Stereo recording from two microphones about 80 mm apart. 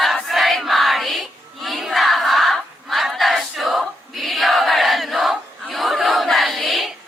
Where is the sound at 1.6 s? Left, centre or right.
Centre.